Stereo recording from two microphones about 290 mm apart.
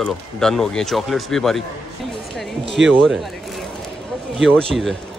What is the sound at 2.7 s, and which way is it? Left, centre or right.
Speech, centre.